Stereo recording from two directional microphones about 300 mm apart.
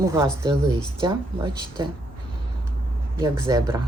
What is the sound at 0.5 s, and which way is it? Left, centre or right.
Speech, centre.